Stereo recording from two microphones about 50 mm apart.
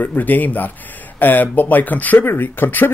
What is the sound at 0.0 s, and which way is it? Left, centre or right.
Speech, left.